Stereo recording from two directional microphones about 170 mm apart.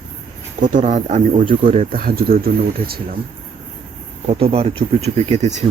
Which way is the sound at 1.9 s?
60° right (ahead or behind).